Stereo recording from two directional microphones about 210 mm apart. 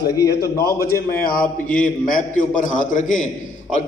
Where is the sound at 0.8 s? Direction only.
45° left (ahead or behind).